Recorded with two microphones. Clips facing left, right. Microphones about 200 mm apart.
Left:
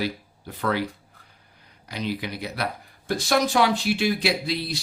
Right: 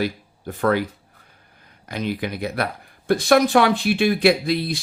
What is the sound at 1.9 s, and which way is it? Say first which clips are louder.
Speech: right 4 dB; 50° right (ahead or behind).